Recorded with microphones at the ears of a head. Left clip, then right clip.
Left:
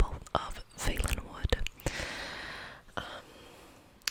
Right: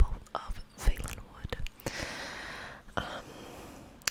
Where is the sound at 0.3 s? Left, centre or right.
Left.